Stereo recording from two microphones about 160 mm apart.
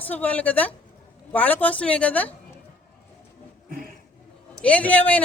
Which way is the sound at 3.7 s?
65° right (ahead or behind).